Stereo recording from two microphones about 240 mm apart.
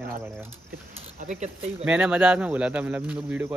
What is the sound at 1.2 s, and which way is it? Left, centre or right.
Speech, right.